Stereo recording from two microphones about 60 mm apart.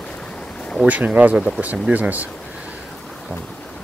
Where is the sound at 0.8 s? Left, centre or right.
Right.